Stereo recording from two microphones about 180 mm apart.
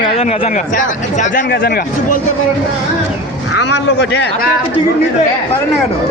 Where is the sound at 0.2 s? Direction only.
35° left (ahead or behind); by 2.2 s 55° left (ahead or behind).